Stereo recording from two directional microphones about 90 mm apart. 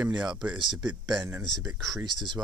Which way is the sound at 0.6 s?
55° right (ahead or behind).